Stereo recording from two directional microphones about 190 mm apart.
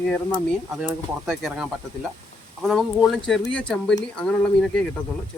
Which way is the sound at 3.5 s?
5° left (ahead or behind).